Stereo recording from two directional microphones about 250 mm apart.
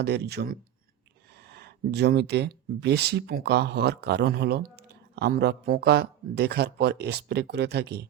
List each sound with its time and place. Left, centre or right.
0.0 s speech: right